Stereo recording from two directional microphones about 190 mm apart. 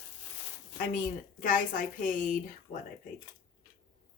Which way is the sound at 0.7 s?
45° left (ahead or behind).